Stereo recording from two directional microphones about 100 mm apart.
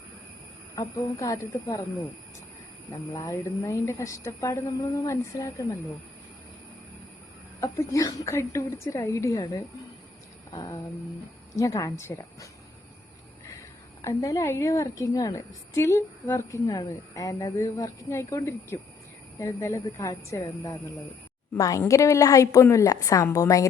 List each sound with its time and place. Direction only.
0.8 s a woman's voice: 30° left (ahead or behind)
7.6 s a woman's voice: 30° left (ahead or behind)
10.5 s a sound: 40° left (ahead or behind)
11.5 s a woman's voice: 35° left (ahead or behind)
14.0 s a woman's voice: 35° left (ahead or behind)